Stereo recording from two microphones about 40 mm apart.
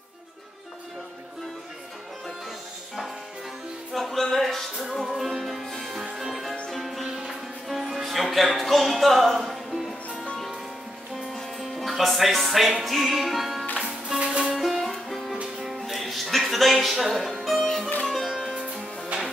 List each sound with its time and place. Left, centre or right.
3.9 s music: centre
11.1 s music: centre
13.7 s music: centre
14.5 s music: centre
19.1 s music: right